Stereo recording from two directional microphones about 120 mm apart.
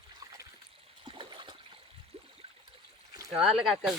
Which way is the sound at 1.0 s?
45° right (ahead or behind).